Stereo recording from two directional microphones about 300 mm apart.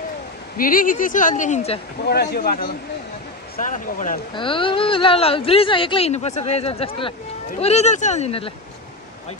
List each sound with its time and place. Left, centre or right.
0.6 s speech: left
2.0 s speech: left